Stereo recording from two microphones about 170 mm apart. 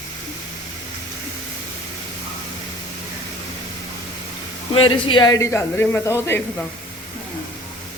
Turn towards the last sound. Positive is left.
turn(degrees=15)  # may be behind; listen again after turning